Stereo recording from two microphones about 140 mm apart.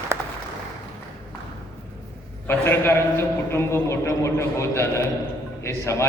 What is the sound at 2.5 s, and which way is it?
A man's voice, 15° left (ahead or behind).